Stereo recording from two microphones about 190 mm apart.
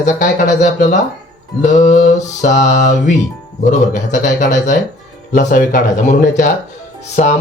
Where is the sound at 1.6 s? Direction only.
40° left (ahead or behind).